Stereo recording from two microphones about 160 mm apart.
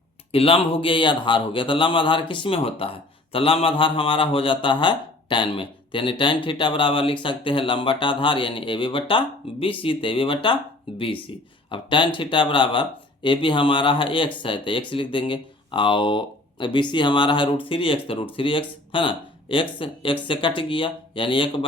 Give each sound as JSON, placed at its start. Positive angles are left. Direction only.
{"t": 0.3, "sound": "a man's voice", "side_deg": 35}